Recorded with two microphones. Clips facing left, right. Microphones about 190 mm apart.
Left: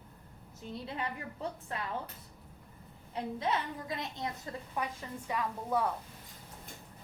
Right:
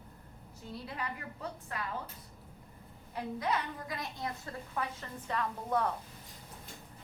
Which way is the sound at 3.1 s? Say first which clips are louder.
Left 1 dB; 25° left (ahead or behind).